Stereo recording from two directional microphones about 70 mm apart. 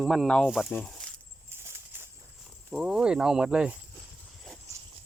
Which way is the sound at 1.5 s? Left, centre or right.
Right.